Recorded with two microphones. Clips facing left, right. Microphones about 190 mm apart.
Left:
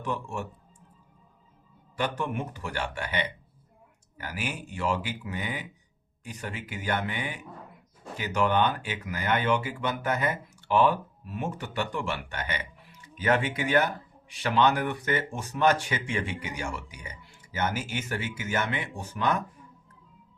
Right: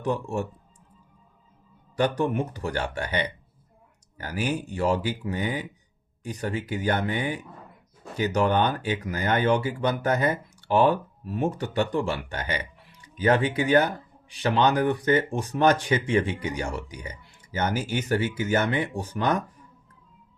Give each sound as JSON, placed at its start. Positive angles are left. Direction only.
{"t": 0.0, "sound": "speech", "side_deg": -35}
{"t": 2.0, "sound": "speech", "side_deg": -40}